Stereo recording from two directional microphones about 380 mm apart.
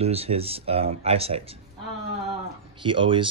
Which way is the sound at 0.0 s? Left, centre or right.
Centre.